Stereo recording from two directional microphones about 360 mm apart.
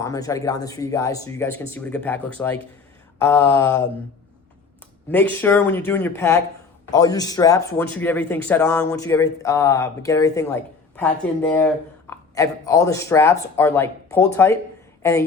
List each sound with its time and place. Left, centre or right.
0.0 s speech: centre
5.0 s speech: centre